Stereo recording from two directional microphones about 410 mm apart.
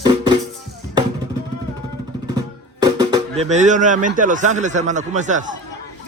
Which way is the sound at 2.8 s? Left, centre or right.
Centre.